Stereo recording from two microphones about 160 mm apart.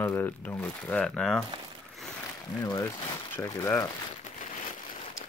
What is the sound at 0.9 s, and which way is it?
Speech, 5° left (ahead or behind).